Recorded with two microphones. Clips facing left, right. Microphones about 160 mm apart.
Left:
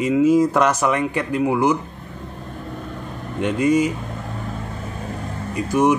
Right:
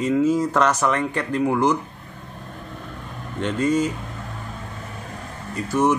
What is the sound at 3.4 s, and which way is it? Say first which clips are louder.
Speech: left 3 dB; 10° left (ahead or behind).